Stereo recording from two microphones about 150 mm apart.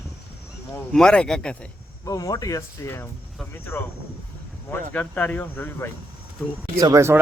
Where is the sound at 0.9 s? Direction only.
5° left (ahead or behind).